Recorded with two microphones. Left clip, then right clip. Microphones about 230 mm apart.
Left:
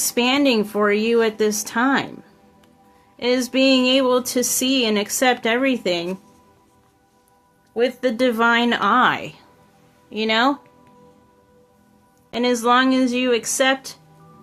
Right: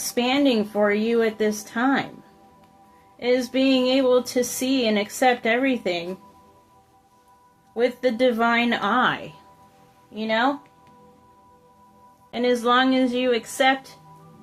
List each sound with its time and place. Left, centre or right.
0.0 s speech: left
3.2 s speech: left
7.7 s speech: left
10.2 s speech: left
12.3 s a woman's voice: left